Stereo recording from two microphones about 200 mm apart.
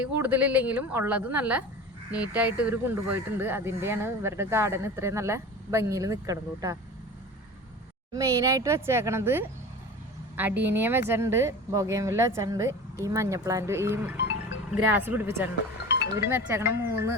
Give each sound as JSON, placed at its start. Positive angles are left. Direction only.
{"t": 0.0, "sound": "speech", "side_deg": -10}
{"t": 8.1, "sound": "speech", "side_deg": -15}
{"t": 14.2, "sound": "music", "side_deg": 65}
{"t": 14.8, "sound": "speech", "side_deg": -10}